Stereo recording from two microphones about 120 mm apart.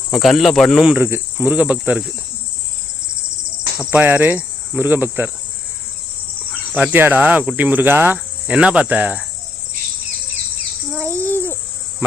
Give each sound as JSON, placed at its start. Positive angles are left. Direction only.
{"t": 0.1, "sound": "cricket", "side_deg": 0}
{"t": 1.0, "sound": "cricket", "side_deg": -20}
{"t": 3.9, "sound": "cricket", "side_deg": -15}
{"t": 6.7, "sound": "cricket", "side_deg": -15}
{"t": 11.2, "sound": "speech", "side_deg": 20}